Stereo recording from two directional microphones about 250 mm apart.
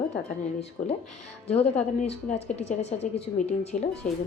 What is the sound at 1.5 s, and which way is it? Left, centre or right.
Speech, left.